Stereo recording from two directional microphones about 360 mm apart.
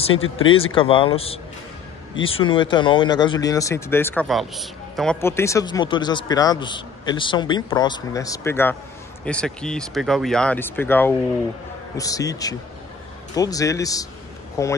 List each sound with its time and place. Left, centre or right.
0.1 s speech: left
0.6 s speech: centre